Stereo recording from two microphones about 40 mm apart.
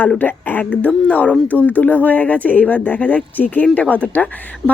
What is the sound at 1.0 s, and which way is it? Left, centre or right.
A woman's voice, left.